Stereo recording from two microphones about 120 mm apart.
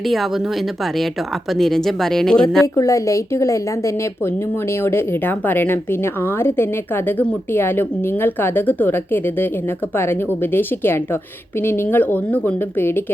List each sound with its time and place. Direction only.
0.1 s speech: centre (ahead or behind)
1.5 s speech: 5° left (ahead or behind)
2.7 s a woman's voice: 25° left (ahead or behind)